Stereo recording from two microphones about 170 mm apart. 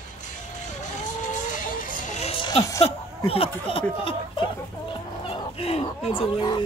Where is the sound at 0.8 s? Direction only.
50° left (ahead or behind); by 4.5 s 30° left (ahead or behind).